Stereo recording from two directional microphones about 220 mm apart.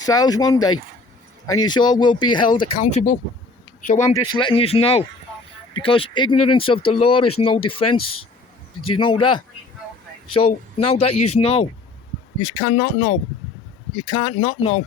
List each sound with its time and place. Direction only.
0.0 s speech: 15° left (ahead or behind); by 4.1 s 35° left (ahead or behind)
4.1 s speech: 20° left (ahead or behind)
10.4 s speech: 25° left (ahead or behind)
14.0 s speech: 25° left (ahead or behind)